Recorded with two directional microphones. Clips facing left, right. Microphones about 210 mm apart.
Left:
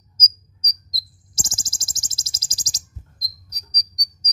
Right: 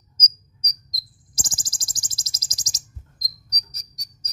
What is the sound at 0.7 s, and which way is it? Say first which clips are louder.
Cricket: left 2 dB; 30° left (ahead or behind).